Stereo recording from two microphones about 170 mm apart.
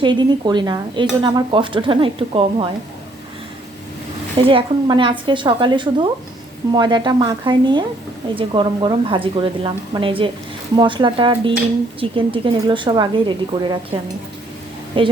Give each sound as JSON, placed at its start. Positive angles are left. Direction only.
{"t": 0.0, "sound": "a woman's voice", "side_deg": -25}
{"t": 4.4, "sound": "a woman's voice", "side_deg": -30}
{"t": 15.0, "sound": "a woman's voice", "side_deg": -30}